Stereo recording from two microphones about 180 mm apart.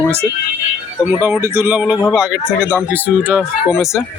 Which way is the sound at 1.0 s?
10° right (ahead or behind).